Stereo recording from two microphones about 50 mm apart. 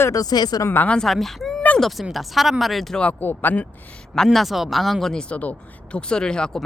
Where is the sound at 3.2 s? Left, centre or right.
Left.